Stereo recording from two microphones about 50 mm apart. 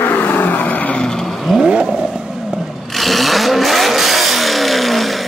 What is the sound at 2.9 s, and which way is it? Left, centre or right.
Vehicle, centre.